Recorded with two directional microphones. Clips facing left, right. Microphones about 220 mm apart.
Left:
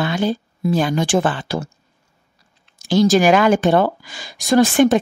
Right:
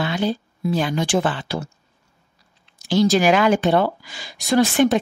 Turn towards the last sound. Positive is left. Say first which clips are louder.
# left 3 dB
turn(degrees=45)  # may be behind; listen again after turning